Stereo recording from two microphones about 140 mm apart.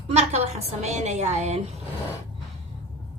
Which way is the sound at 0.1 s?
50° right (ahead or behind).